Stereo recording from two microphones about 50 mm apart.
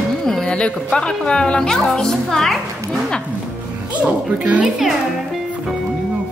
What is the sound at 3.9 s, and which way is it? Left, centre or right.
Speech, right.